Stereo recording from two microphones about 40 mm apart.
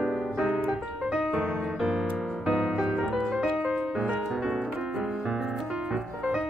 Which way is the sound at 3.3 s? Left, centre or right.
Right.